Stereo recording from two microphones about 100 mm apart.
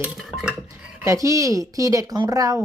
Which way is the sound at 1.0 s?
30° right (ahead or behind).